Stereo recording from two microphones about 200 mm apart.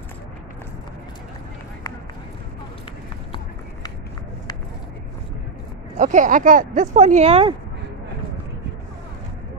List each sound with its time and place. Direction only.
5.9 s speech: 40° right (ahead or behind)